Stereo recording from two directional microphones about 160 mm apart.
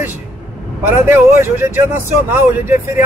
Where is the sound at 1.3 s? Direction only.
15° right (ahead or behind).